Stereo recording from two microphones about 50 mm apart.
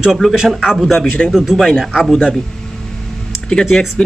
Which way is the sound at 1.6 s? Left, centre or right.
Centre.